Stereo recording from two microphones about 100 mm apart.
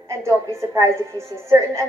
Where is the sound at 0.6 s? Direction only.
30° right (ahead or behind).